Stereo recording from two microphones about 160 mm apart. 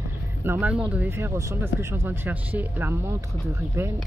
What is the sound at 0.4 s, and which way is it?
Speech, 10° right (ahead or behind).